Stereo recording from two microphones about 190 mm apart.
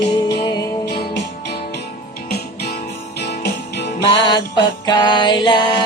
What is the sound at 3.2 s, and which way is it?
Music, 60° left (ahead or behind).